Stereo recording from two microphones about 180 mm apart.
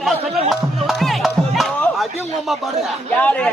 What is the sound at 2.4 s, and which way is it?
Speech, centre (ahead or behind).